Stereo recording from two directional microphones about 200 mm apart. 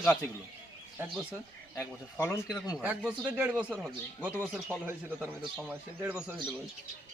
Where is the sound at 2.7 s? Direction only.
Centre (ahead or behind).